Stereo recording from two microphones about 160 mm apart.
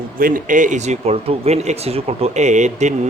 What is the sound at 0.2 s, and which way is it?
Speech, 60° right (ahead or behind).